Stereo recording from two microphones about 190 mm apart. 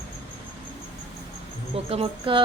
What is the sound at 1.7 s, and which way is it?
Speech, 30° right (ahead or behind).